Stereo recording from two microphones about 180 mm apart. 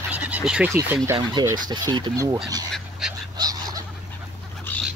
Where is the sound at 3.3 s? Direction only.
20° right (ahead or behind).